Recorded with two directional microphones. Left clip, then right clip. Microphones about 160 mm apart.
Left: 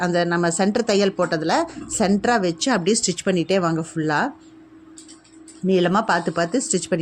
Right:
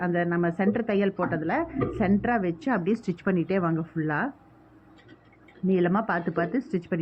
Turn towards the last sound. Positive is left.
turn(degrees=35)  # may be behind; listen again after turning